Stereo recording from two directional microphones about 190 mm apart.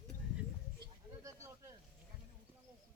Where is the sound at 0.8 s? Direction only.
15° right (ahead or behind).